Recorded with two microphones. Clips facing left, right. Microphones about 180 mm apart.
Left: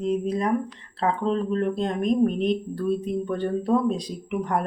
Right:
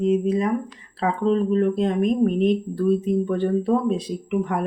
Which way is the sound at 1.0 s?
5° right (ahead or behind).